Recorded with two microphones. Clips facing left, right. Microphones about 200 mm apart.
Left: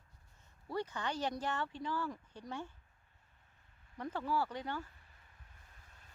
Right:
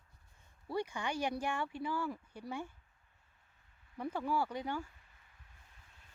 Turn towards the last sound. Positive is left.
turn(degrees=-10)  # may be behind; listen again after turning